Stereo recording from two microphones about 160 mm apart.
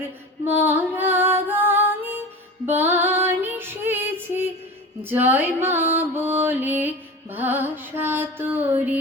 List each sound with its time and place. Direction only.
0.4 s music: 10° right (ahead or behind)
2.6 s female singing: 10° right (ahead or behind)
5.0 s music: 10° right (ahead or behind)